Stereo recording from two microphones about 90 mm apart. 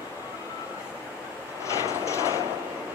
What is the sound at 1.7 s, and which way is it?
Vehicle, 35° left (ahead or behind).